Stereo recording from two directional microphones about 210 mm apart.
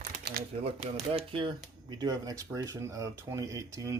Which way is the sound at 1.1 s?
25° right (ahead or behind).